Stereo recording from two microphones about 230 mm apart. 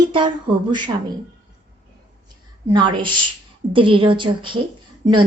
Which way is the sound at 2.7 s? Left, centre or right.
Centre.